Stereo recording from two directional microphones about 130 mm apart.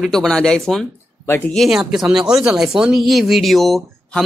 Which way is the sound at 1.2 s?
15° left (ahead or behind).